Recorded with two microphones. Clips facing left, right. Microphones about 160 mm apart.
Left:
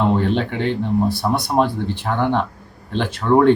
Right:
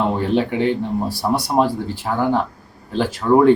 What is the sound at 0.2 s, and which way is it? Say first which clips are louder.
Speech: right 2 dB; 10° right (ahead or behind).